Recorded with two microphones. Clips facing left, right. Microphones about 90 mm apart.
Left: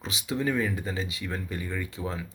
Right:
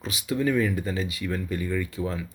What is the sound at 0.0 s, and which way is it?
Speech, 25° left (ahead or behind).